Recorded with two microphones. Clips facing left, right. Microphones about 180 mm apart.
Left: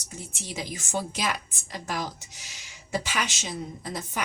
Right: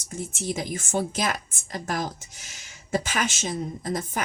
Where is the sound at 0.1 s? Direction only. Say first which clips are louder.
Right 8 dB; 50° right (ahead or behind).